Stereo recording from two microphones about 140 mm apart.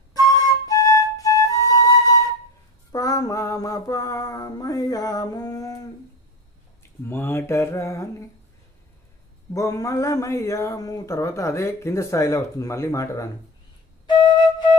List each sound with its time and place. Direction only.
0.1 s flute: 25° left (ahead or behind)
2.9 s speech: 25° left (ahead or behind)
7.1 s speech: 15° left (ahead or behind)
9.5 s speech: 25° left (ahead or behind)